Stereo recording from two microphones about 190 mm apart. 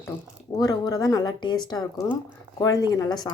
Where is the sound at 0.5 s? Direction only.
20° left (ahead or behind).